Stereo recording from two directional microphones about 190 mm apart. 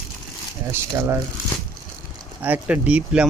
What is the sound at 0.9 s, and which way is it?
Speech, 20° right (ahead or behind).